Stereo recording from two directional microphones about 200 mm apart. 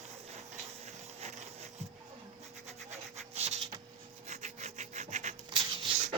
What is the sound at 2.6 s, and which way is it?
Rub, 35° right (ahead or behind).